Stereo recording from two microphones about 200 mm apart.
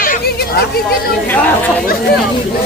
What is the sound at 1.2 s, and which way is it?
Speech, 10° left (ahead or behind).